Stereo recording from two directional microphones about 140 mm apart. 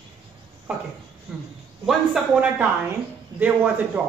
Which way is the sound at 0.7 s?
10° right (ahead or behind).